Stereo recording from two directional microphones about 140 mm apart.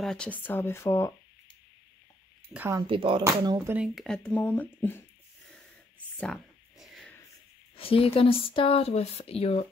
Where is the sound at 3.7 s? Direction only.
Centre (ahead or behind).